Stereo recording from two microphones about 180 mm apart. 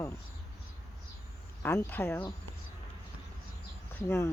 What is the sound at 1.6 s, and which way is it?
Speech, 10° left (ahead or behind).